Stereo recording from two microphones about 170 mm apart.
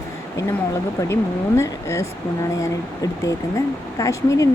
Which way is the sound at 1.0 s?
15° left (ahead or behind).